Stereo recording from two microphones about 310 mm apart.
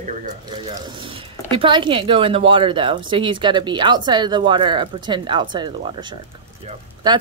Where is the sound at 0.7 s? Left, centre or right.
Centre.